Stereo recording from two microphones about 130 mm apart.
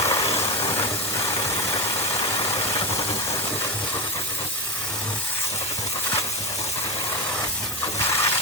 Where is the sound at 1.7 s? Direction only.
35° left (ahead or behind).